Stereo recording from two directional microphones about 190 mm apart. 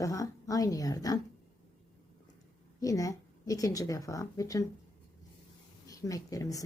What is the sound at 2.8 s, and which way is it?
Speech, 15° left (ahead or behind).